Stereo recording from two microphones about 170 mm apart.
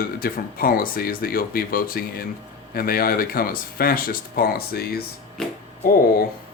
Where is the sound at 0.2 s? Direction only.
60° left (ahead or behind).